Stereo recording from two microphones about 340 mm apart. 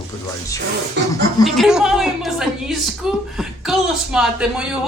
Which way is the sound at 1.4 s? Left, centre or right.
Centre.